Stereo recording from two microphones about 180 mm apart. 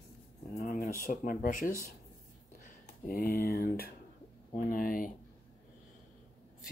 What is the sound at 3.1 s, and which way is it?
Speech, 55° left (ahead or behind).